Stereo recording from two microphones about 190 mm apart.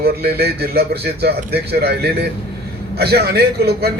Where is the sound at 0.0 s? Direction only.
55° right (ahead or behind).